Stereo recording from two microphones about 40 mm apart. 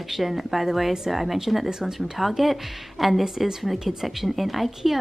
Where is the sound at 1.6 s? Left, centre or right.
Centre.